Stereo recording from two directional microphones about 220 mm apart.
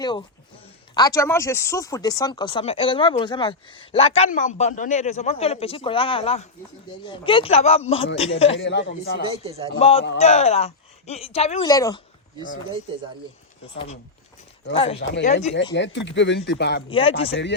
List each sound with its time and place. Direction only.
0.0 s speech: 20° left (ahead or behind)
8.5 s speech: 55° left (ahead or behind)
9.3 s a man's voice: 25° right (ahead or behind)
9.7 s speech: 25° left (ahead or behind)
11.6 s a woman's voice: 15° left (ahead or behind)
13.7 s speech: 30° left (ahead or behind)
15.7 s speech: 55° left (ahead or behind)
16.9 s speech: 25° left (ahead or behind)